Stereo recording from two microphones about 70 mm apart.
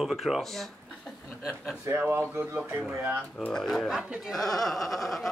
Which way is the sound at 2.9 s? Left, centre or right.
Right.